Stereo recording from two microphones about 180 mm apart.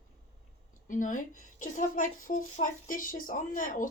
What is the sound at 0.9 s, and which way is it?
Speech, 45° left (ahead or behind).